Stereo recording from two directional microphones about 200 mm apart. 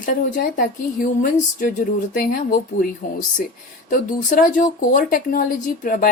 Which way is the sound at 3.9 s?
45° left (ahead or behind).